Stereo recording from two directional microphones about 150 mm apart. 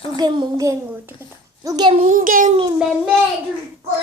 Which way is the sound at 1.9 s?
55° right (ahead or behind).